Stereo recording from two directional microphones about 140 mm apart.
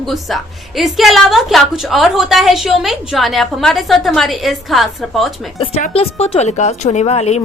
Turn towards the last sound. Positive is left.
turn(degrees=45)  # may be behind; listen again after turning